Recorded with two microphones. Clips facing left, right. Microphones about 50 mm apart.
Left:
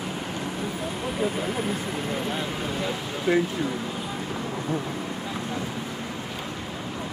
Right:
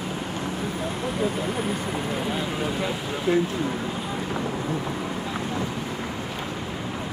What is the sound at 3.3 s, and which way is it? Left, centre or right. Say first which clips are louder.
Speech: even; left.